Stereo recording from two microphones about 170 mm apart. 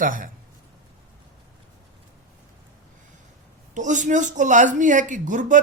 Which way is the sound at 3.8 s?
45° right (ahead or behind).